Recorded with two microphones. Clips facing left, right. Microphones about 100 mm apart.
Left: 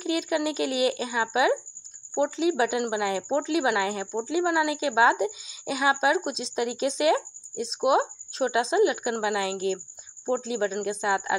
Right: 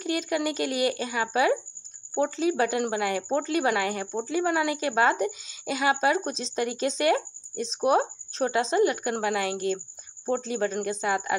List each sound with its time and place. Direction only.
0.0 s speech: 15° left (ahead or behind)